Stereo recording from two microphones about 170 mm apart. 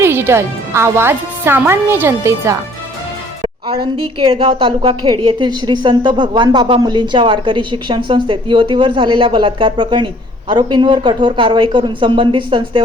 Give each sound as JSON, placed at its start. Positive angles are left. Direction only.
{"t": 0.0, "sound": "speech", "side_deg": -15}
{"t": 3.4, "sound": "a woman's voice", "side_deg": -30}